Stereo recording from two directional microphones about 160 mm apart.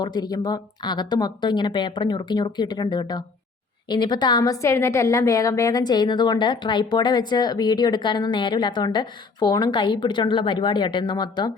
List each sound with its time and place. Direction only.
0.0 s a woman's voice: 25° left (ahead or behind)